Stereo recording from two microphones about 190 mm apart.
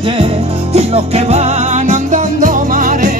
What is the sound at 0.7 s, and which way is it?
Music, 35° right (ahead or behind).